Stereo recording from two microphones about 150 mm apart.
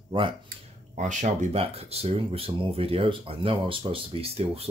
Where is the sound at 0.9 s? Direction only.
55° right (ahead or behind).